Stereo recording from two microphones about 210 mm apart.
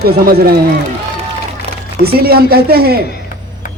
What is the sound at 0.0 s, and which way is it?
Speech, 45° right (ahead or behind).